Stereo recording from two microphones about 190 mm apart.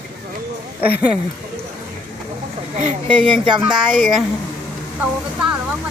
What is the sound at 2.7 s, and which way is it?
Speech, 40° right (ahead or behind).